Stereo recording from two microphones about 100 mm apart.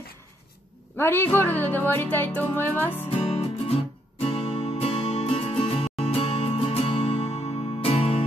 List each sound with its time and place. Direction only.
0.9 s speech: 20° left (ahead or behind)
3.1 s music: 85° left; by 8.2 s 70° left (ahead or behind)